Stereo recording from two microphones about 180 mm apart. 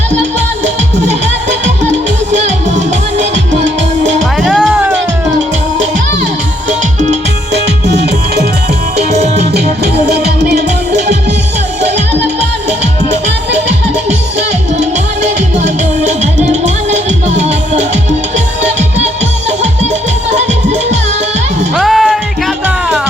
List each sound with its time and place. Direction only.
2.3 s music: 40° right (ahead or behind)
4.4 s music: 5° right (ahead or behind)
9.0 s music: 40° right (ahead or behind)
9.5 s music: 65° right (ahead or behind)
12.8 s music: 40° right (ahead or behind)
21.8 s music: centre (ahead or behind)